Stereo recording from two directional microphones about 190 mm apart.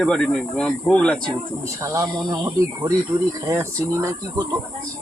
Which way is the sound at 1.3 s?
15° right (ahead or behind).